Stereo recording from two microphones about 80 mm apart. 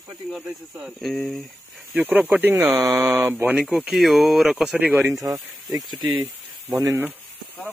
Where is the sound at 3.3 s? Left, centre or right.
Right.